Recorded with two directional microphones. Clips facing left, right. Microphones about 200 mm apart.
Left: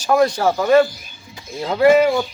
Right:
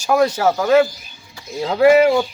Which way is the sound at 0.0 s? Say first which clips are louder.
Even; 5° right (ahead or behind).